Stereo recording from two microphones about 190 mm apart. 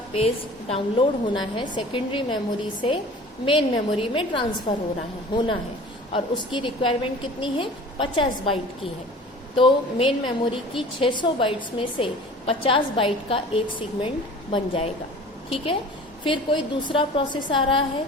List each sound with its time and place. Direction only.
0.7 s a woman's voice: 30° left (ahead or behind)